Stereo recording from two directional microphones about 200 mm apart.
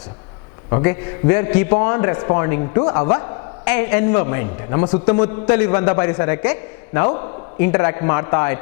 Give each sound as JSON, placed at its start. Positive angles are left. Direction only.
{"t": 0.7, "sound": "a man's voice", "side_deg": 15}
{"t": 3.6, "sound": "a man's voice", "side_deg": 10}
{"t": 5.9, "sound": "a man's voice", "side_deg": 20}